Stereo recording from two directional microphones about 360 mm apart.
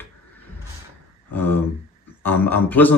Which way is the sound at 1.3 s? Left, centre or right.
Centre.